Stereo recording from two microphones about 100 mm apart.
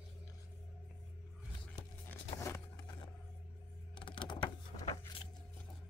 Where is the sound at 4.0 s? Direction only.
55° left (ahead or behind).